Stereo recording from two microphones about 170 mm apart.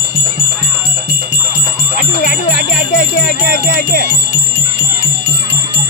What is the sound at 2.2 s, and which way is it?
Jingle bell, 65° left (ahead or behind).